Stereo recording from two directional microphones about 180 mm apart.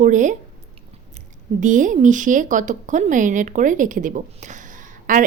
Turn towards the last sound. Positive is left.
turn(degrees=-45)  # may be behind; listen again after turning